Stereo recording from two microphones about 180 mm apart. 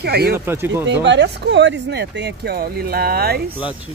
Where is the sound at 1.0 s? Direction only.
80° right; by 3.4 s 60° right (ahead or behind).